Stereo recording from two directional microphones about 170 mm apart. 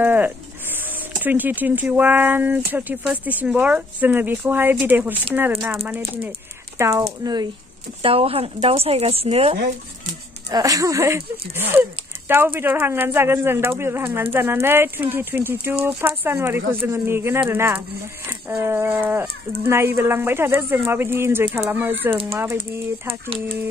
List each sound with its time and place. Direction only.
0.0 s speech: 10° right (ahead or behind)
8.0 s speech: 35° right (ahead or behind)
10.5 s speech: 20° right (ahead or behind)